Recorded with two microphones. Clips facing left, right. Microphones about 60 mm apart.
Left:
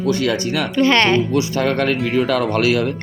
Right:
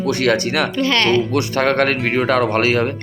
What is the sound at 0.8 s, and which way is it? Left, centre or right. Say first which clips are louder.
Speech: left 3 dB; left.